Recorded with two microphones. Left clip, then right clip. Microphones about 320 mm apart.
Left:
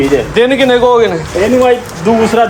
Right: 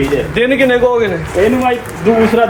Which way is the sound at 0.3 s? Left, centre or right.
Left.